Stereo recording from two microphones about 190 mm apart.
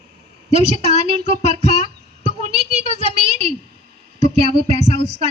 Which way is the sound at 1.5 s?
35° right (ahead or behind).